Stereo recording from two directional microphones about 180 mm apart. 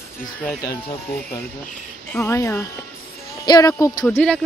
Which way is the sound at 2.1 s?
15° left (ahead or behind).